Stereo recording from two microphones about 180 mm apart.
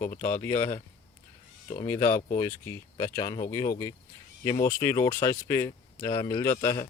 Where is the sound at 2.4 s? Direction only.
15° left (ahead or behind).